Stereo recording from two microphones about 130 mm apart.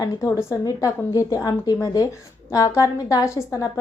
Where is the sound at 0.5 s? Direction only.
25° left (ahead or behind).